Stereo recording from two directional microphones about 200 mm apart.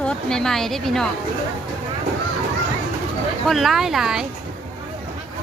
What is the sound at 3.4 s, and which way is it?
Speech, centre (ahead or behind).